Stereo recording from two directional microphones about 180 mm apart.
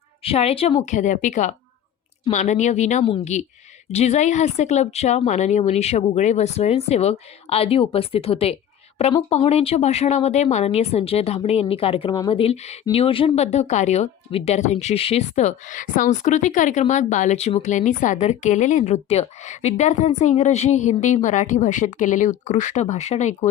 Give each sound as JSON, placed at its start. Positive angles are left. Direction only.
{"t": 0.2, "sound": "speech", "side_deg": 35}